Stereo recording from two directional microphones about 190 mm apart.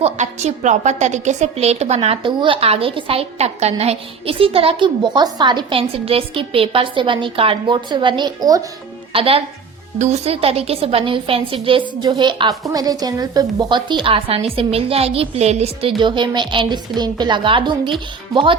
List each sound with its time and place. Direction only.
0.0 s a woman's voice: 35° right (ahead or behind); by 8.6 s 20° right (ahead or behind)
9.1 s a woman's voice: 30° right (ahead or behind)